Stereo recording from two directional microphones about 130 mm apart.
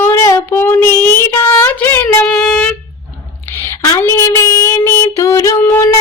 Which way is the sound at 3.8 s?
25° left (ahead or behind).